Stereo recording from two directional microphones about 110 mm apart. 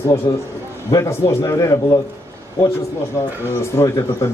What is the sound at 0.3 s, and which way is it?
Mantra, 35° left (ahead or behind).